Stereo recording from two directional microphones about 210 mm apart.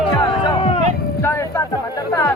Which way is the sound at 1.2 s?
10° left (ahead or behind).